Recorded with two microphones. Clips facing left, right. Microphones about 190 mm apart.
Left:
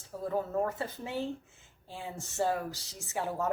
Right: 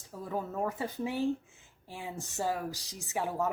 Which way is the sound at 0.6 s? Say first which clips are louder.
Right 1 dB; 15° right (ahead or behind).